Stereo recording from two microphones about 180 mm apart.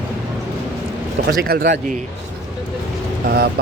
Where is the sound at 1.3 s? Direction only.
55° right (ahead or behind).